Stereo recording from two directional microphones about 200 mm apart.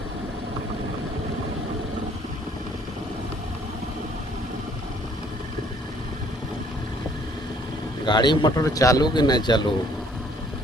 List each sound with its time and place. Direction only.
8.0 s speech: 20° left (ahead or behind)